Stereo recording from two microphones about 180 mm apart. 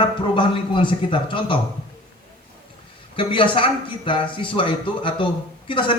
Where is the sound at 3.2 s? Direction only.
30° left (ahead or behind).